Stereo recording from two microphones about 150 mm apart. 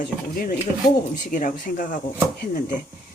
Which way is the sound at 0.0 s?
65° left (ahead or behind).